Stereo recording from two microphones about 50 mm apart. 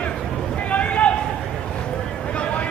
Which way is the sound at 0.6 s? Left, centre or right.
Left.